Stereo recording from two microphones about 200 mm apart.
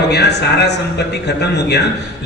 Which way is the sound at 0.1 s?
55° left (ahead or behind).